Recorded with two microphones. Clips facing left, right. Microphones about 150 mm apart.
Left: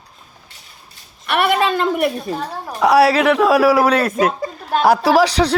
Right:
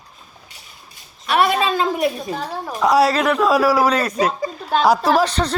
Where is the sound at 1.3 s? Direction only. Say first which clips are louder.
Left 1 dB; 65° left (ahead or behind).